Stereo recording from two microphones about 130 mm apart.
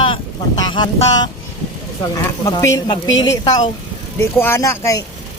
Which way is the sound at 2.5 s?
25° left (ahead or behind).